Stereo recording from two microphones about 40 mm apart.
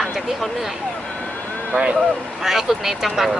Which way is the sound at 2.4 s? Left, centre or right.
Centre.